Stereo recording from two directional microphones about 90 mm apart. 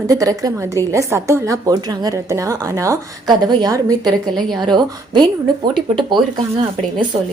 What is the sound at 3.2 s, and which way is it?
A woman's voice, 55° right (ahead or behind).